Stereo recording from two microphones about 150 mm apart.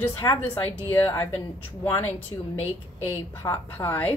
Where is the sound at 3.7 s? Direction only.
15° left (ahead or behind).